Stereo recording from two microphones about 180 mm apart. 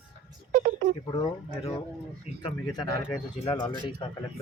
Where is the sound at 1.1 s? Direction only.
25° left (ahead or behind).